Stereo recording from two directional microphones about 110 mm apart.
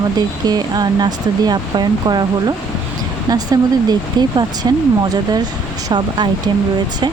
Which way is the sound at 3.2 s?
35° right (ahead or behind).